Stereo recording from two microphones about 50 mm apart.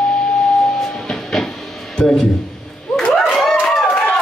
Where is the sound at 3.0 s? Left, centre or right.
Centre.